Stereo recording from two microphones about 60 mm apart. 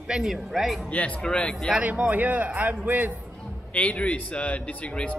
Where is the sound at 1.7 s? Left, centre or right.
Centre.